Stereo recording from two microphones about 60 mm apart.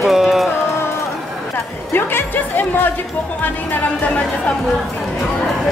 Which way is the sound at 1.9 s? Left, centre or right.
Left.